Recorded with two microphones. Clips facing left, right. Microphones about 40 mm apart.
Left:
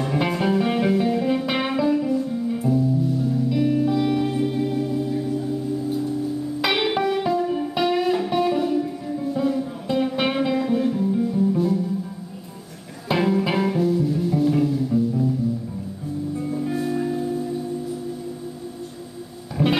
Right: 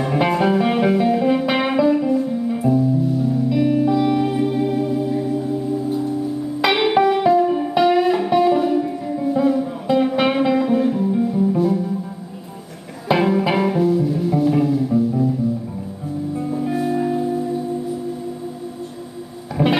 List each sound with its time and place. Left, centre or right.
0.0 s music: centre
13.1 s music: centre
16.3 s music: centre
19.5 s music: centre